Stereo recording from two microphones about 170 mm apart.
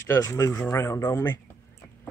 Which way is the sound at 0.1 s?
15° left (ahead or behind).